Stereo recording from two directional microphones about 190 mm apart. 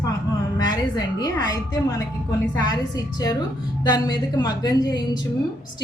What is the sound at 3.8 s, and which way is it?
A woman's voice, 20° left (ahead or behind).